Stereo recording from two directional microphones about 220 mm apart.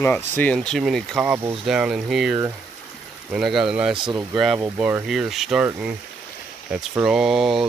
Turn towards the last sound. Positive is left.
turn(degrees=0)  # may be behind; listen again after turning